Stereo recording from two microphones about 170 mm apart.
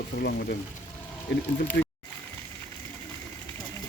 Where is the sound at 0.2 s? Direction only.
75° left (ahead or behind).